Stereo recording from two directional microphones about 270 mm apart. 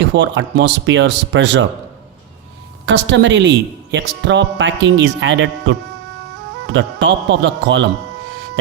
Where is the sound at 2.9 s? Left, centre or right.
Right.